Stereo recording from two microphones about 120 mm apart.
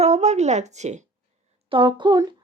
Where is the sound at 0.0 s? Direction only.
65° right (ahead or behind).